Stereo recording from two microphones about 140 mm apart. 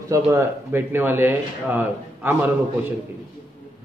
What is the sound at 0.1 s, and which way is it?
A man's voice, 20° right (ahead or behind).